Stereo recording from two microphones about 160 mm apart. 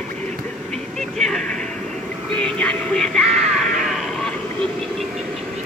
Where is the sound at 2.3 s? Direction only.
5° left (ahead or behind).